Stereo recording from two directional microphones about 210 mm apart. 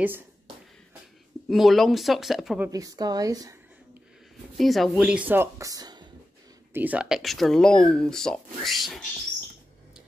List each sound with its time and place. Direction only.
1.5 s speech: centre (ahead or behind)
2.7 s a woman's voice: 15° right (ahead or behind)
4.6 s a woman's voice: centre (ahead or behind); by 6.0 s 20° right (ahead or behind)
6.7 s speech: 5° right (ahead or behind)